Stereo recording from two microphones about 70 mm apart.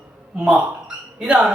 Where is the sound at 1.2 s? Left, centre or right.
Centre.